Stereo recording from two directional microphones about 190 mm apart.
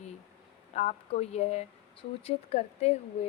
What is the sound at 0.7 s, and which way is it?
A woman's voice, 35° left (ahead or behind).